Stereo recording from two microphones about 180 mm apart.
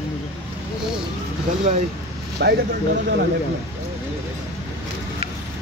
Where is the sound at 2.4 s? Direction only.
70° right (ahead or behind).